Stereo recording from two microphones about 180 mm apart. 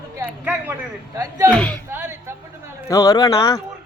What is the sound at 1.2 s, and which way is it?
Speech, 20° right (ahead or behind).